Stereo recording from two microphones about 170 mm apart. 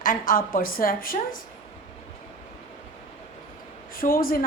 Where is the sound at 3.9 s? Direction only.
55° left (ahead or behind).